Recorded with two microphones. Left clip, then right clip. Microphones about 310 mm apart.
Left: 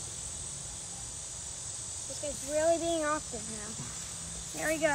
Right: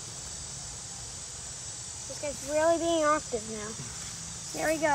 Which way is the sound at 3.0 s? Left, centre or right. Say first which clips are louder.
Right 6 dB; right.